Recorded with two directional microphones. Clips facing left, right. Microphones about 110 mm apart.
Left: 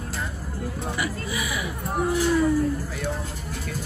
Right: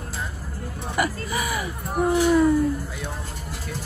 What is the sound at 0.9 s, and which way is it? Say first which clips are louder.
Whimper: right 8 dB; 45° right (ahead or behind).